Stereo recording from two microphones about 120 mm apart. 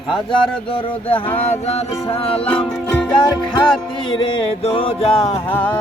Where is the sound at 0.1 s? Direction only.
45° left (ahead or behind).